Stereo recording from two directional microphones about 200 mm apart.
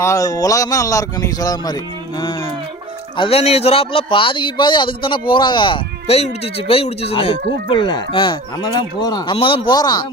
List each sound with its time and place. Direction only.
0.0 s speech: 15° left (ahead or behind)
3.2 s a man's voice: 30° left (ahead or behind)